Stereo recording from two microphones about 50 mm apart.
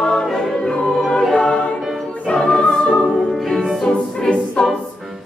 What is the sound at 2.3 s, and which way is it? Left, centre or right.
Choir, centre.